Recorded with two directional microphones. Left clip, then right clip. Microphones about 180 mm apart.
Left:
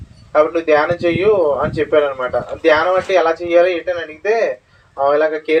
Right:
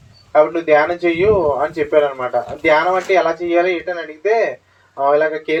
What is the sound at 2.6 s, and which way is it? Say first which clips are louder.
Speech: left 1 dB; 30° left (ahead or behind).